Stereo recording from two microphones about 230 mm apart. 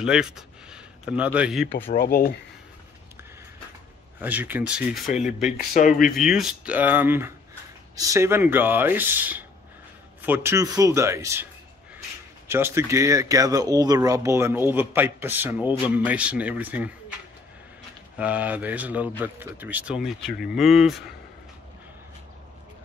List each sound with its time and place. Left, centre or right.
0.0 s speech: centre
2.0 s speech: left
4.2 s speech: centre
5.7 s speech: left
6.1 s speech: centre
12.4 s speech: centre
18.1 s speech: centre